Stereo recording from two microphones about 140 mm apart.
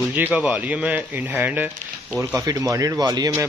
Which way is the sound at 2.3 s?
25° right (ahead or behind).